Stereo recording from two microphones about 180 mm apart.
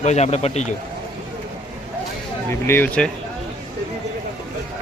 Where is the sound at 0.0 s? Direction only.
40° left (ahead or behind).